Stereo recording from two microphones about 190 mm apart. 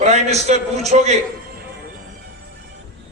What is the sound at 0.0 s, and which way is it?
A man's voice, 35° right (ahead or behind).